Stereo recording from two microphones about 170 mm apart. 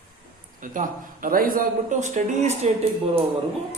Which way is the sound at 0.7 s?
55° right (ahead or behind).